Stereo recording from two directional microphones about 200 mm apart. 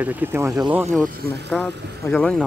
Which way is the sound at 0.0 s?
10° right (ahead or behind).